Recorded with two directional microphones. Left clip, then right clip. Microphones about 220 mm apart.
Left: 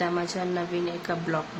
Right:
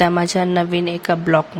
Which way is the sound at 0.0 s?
40° right (ahead or behind).